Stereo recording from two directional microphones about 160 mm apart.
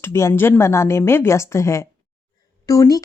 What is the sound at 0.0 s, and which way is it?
A woman's voice, 15° left (ahead or behind).